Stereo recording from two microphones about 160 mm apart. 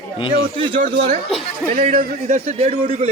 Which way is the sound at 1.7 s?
45° right (ahead or behind).